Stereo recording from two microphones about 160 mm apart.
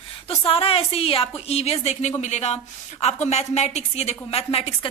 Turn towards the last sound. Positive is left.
turn(degrees=40)  # may be behind; listen again after turning